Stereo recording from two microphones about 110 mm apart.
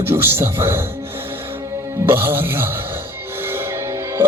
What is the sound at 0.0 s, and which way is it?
Speech, 20° right (ahead or behind).